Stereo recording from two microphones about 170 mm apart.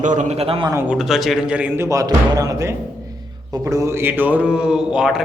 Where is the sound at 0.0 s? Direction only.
45° right (ahead or behind).